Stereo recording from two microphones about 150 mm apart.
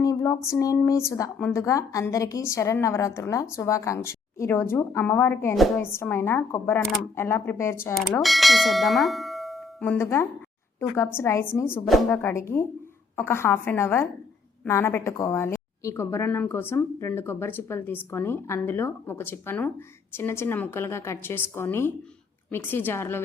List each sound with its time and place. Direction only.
0.0 s a woman's voice: 20° left (ahead or behind)
8.2 s bell: centre (ahead or behind)
9.8 s a woman's voice: 15° left (ahead or behind)